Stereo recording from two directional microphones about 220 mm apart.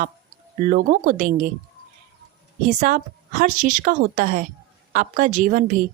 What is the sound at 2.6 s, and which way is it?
A woman's voice, 35° right (ahead or behind).